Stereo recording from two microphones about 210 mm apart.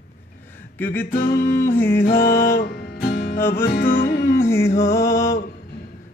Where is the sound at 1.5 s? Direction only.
10° left (ahead or behind).